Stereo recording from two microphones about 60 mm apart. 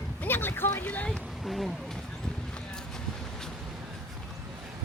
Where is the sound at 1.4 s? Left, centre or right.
Centre.